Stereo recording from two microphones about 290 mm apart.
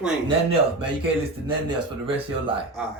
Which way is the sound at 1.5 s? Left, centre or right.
Centre.